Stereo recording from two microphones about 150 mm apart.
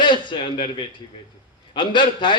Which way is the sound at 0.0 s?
30° left (ahead or behind).